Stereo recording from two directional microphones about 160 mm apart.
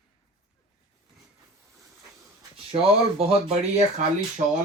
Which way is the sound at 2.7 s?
35° right (ahead or behind).